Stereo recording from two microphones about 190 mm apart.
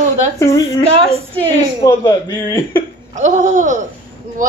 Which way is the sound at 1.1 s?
30° right (ahead or behind).